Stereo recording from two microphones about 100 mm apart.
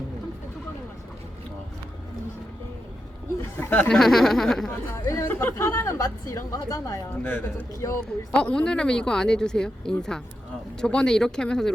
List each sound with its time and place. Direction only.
3.6 s speech: 20° left (ahead or behind)
3.9 s speech: 5° left (ahead or behind)
5.0 s speech: 30° left (ahead or behind)
8.0 s speech: 10° left (ahead or behind)